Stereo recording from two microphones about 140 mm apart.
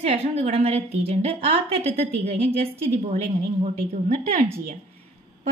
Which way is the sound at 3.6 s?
60° right (ahead or behind).